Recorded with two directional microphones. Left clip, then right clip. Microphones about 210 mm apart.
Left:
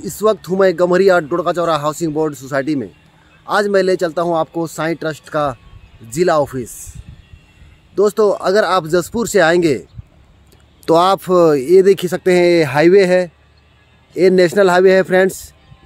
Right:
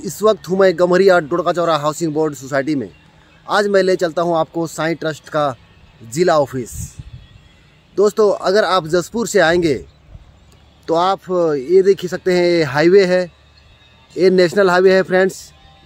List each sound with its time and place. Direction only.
0.0 s speech: 5° left (ahead or behind)
7.9 s speech: 10° left (ahead or behind)
10.9 s speech: 55° left (ahead or behind); by 15.5 s 20° left (ahead or behind)